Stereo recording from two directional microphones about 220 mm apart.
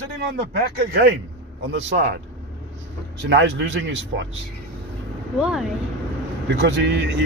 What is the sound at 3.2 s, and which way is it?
Speech, 55° right (ahead or behind).